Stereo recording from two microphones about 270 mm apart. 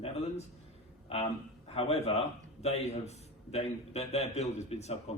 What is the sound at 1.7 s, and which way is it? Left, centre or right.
A man's voice, left.